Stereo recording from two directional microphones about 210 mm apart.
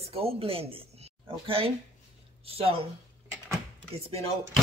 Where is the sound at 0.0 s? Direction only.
30° right (ahead or behind).